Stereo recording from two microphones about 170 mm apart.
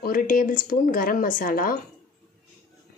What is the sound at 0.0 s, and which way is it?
Speech, 55° left (ahead or behind).